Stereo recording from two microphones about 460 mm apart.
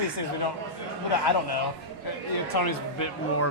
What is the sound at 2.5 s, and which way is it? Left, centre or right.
Speech, left.